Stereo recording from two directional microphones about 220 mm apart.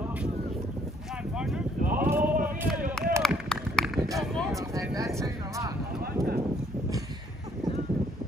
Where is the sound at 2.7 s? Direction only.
Centre (ahead or behind).